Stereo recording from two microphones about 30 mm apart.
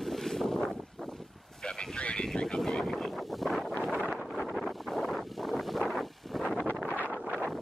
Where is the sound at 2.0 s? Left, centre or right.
Left.